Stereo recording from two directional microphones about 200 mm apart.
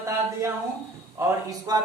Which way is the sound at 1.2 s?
20° right (ahead or behind).